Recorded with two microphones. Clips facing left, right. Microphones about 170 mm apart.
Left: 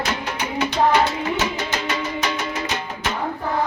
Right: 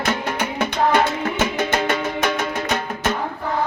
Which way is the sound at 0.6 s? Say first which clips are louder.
Left 1 dB; 50° right (ahead or behind).